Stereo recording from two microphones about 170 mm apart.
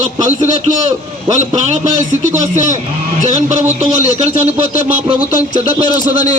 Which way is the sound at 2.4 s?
45° right (ahead or behind).